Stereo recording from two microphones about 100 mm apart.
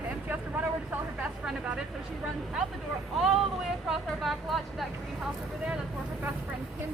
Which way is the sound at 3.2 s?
Centre (ahead or behind).